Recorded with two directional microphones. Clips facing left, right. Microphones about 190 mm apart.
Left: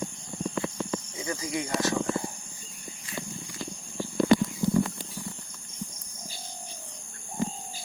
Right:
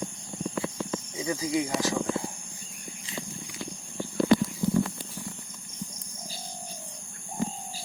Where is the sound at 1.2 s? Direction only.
15° right (ahead or behind).